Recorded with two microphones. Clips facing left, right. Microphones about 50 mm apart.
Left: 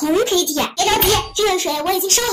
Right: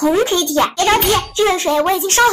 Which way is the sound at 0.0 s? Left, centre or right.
Right.